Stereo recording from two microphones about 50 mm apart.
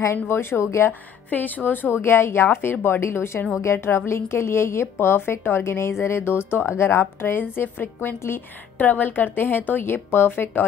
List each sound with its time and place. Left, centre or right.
0.3 s a woman's voice: left
0.7 s a woman's voice: left
1.3 s a woman's voice: left
8.7 s a woman's voice: left